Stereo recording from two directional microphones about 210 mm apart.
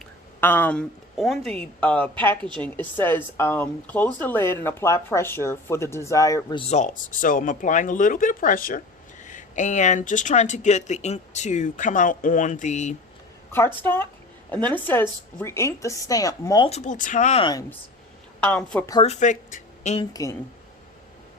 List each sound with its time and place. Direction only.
0.3 s speech: 10° left (ahead or behind); by 13.0 s 35° left (ahead or behind)
13.5 s speech: 10° left (ahead or behind)
16.6 s speech: 35° left (ahead or behind)
18.3 s speech: 5° left (ahead or behind)
19.0 s speech: 35° left (ahead or behind)